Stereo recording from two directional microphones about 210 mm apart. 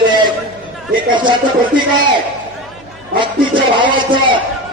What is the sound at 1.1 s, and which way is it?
Speech, 20° right (ahead or behind).